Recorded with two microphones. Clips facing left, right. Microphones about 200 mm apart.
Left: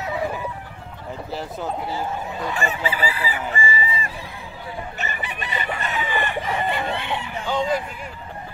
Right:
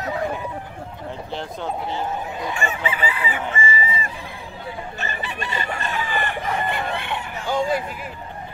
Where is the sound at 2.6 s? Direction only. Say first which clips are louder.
Left 1 dB; 35° left (ahead or behind).